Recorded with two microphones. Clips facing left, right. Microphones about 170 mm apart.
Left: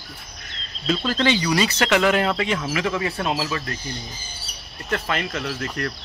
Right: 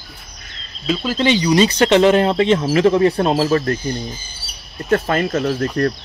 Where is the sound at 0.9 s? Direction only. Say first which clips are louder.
Right 3 dB; 10° right (ahead or behind).